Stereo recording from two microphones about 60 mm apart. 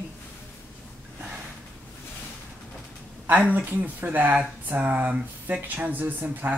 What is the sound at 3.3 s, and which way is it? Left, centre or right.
Speech, right.